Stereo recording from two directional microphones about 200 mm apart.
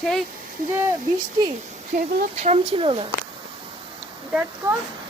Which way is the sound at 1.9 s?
40° right (ahead or behind).